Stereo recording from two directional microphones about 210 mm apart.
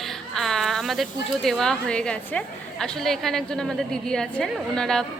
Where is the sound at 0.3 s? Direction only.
Centre (ahead or behind).